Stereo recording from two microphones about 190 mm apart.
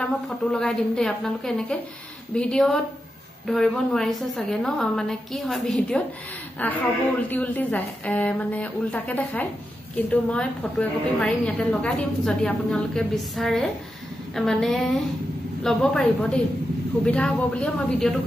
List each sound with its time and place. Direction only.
0.0 s a woman's voice: 5° left (ahead or behind)